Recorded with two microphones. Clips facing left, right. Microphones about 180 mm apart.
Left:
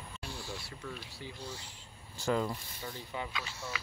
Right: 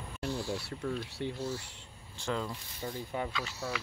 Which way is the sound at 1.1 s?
70° right (ahead or behind).